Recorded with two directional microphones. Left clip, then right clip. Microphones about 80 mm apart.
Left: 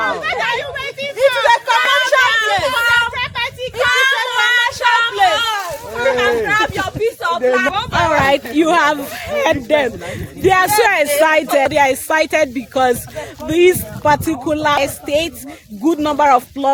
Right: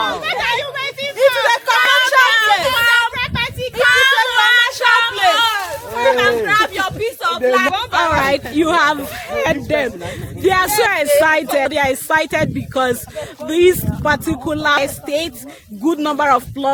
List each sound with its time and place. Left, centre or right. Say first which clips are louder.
0.0 s a sound: left 1 dB; right
7.5 s speech: right 1 dB; right
8.1 s speech: left 4 dB; left
8.5 s speech: right 1 dB; centre
10.4 s speech: left 2 dB; centre